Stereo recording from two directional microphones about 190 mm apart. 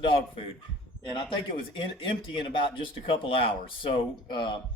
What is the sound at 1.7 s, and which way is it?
Speech, 25° left (ahead or behind).